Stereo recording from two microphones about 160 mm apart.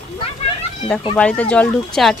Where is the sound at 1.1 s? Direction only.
5° left (ahead or behind).